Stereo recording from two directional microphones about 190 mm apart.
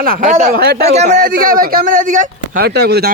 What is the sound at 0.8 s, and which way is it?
Speech, 35° right (ahead or behind).